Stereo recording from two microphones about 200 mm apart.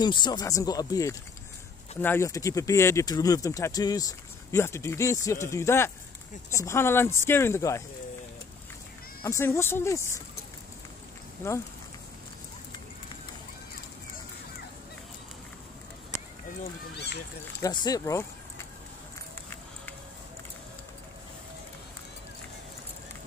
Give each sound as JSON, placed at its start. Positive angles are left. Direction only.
{"t": 0.0, "sound": "speech", "side_deg": 20}
{"t": 9.2, "sound": "speech", "side_deg": 15}
{"t": 11.4, "sound": "speech", "side_deg": 15}
{"t": 16.9, "sound": "speech", "side_deg": 55}
{"t": 17.6, "sound": "speech", "side_deg": 20}